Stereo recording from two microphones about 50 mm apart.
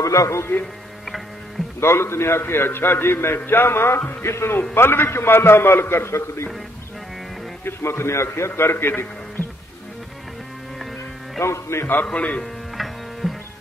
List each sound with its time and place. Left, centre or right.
0.1 s a man's voice: left
1.8 s a man's voice: left
7.6 s a man's voice: left
11.4 s a man's voice: left
12.1 s a man's voice: left
12.7 s music: centre